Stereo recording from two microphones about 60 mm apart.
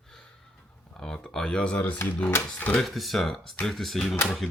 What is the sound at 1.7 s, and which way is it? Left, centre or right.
Speech, left.